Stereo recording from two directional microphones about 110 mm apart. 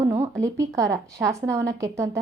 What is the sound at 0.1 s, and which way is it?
A woman's voice, 25° right (ahead or behind).